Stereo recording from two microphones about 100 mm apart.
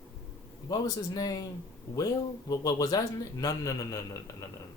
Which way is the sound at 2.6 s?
40° left (ahead or behind).